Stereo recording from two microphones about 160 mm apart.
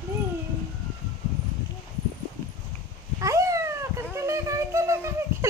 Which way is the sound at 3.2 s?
20° right (ahead or behind).